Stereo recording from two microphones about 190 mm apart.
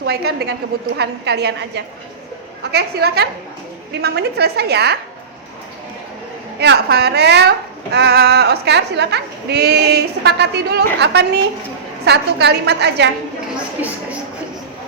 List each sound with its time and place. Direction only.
0.0 s speech: 60° right (ahead or behind)
6.6 s speech: 60° right (ahead or behind)